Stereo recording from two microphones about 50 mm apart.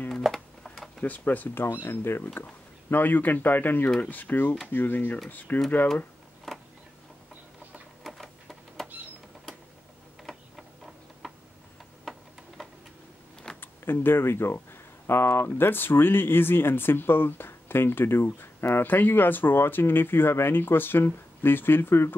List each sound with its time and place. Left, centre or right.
0.2 s a sound: centre
1.0 s speech: left
1.6 s speech: left
2.9 s speech: left
6.5 s a sound: centre
8.0 s printer: centre
12.0 s tick-tock: centre
13.6 s speech: left